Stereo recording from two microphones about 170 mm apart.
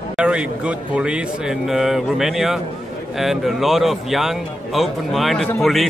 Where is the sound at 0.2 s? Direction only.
5° right (ahead or behind).